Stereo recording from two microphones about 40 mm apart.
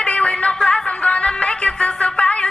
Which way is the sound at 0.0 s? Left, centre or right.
Left.